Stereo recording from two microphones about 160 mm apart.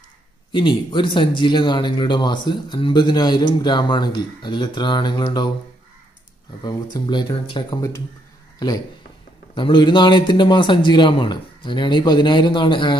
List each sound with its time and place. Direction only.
0.5 s speech: 30° left (ahead or behind)
6.6 s speech: 25° left (ahead or behind)